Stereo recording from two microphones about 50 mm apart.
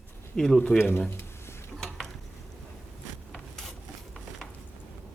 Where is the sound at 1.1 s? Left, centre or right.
Left.